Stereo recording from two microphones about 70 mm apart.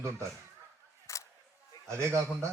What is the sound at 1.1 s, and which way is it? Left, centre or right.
Single-lens reflex camera, left.